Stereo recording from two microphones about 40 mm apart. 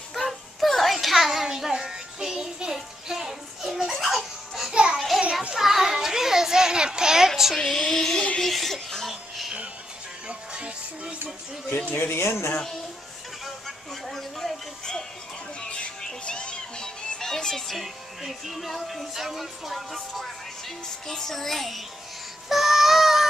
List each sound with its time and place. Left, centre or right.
0.1 s a sound: centre
3.9 s music: centre
4.9 s a sound: centre
5.5 s child singing: centre
7.5 s a sound: centre
8.4 s music: centre
10.2 s music: right
11.9 s speech: left
14.0 s music: centre
16.3 s music: left
17.7 s speech: centre
21.1 s speech: centre
22.5 s a sound: centre